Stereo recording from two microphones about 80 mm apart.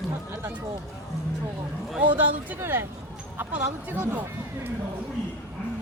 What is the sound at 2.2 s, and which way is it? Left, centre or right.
Speech, right.